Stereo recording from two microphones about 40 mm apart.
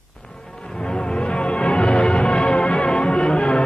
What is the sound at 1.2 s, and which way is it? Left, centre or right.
Music, left.